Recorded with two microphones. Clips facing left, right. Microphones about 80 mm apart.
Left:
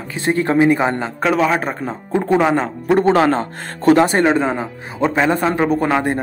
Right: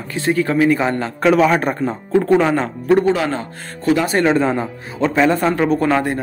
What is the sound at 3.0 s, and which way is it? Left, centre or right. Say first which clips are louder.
Speech: left 3 dB; left.